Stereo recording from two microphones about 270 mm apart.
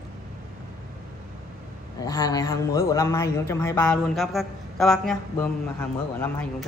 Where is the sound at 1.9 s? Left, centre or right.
Centre.